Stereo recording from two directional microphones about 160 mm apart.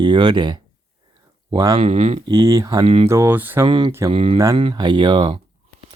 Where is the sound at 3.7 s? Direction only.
30° right (ahead or behind).